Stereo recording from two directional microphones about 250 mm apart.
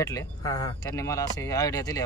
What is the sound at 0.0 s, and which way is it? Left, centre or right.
Speech, centre.